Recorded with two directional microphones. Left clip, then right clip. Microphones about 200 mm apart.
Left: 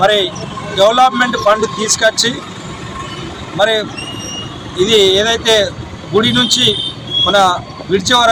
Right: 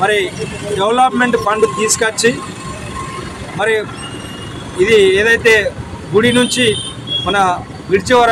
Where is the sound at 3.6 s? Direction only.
10° right (ahead or behind).